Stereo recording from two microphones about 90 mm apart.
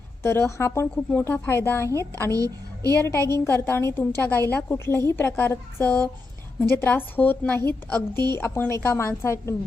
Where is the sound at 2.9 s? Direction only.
30° left (ahead or behind).